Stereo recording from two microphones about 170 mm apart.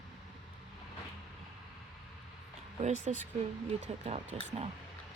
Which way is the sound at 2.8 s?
45° right (ahead or behind).